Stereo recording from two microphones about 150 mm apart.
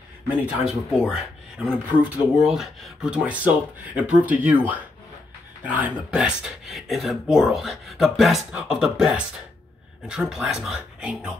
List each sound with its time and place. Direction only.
0.7 s speech: centre (ahead or behind)
5.8 s speech: 5° right (ahead or behind)